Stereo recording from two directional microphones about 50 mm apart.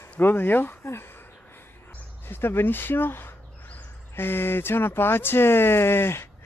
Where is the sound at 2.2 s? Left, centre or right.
Left.